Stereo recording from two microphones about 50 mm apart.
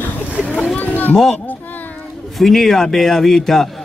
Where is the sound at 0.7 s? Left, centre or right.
Left.